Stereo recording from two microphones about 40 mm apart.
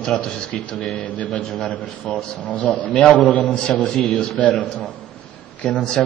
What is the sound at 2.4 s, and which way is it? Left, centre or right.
Speech, left.